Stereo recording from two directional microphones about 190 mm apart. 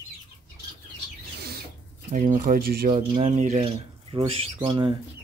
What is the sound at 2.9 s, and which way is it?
Speech, 35° right (ahead or behind).